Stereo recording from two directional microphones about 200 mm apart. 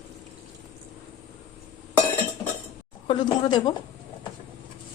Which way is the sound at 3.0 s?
25° left (ahead or behind).